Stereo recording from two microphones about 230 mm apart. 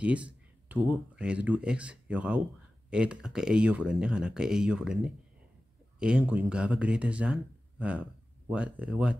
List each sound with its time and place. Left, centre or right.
0.0 s speech: centre